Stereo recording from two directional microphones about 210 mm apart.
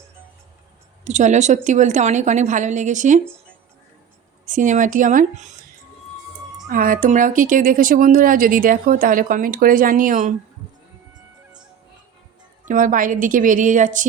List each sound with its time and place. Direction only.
1.0 s speech: 35° right (ahead or behind)
4.4 s speech: 35° right (ahead or behind)
6.7 s speech: 40° right (ahead or behind)
12.6 s speech: 40° right (ahead or behind)